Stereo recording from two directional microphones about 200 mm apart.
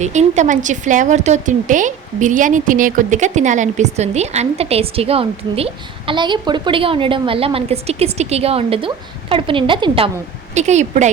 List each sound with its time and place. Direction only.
0.0 s a woman's voice: 35° right (ahead or behind)